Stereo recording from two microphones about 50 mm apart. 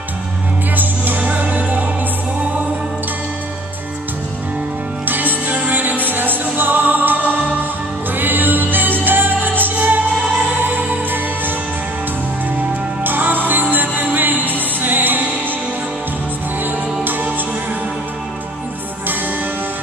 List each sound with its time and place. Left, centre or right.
0.7 s music: right
5.0 s music: right
13.0 s music: right
16.6 s music: right